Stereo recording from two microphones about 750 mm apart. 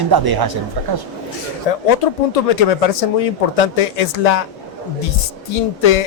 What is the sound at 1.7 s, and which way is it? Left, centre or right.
Speech, left.